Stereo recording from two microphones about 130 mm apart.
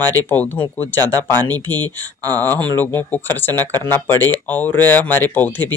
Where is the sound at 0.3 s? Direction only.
15° left (ahead or behind).